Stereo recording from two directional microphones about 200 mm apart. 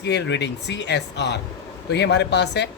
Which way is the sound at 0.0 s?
60° left (ahead or behind).